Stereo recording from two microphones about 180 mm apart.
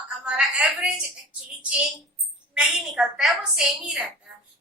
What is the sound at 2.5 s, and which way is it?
A woman's voice, 5° right (ahead or behind).